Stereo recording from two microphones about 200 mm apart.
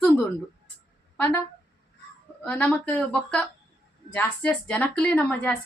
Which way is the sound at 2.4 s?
10° left (ahead or behind).